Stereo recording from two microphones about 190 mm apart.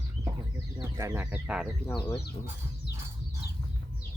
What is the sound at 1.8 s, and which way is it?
Speech, 25° left (ahead or behind).